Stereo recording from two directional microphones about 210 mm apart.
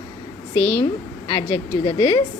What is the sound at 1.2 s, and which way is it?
Speech, 25° left (ahead or behind).